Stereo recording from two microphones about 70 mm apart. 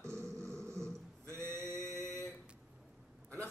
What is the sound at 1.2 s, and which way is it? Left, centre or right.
Male singing, right.